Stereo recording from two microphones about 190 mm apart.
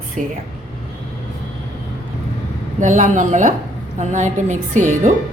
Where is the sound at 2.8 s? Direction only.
40° right (ahead or behind).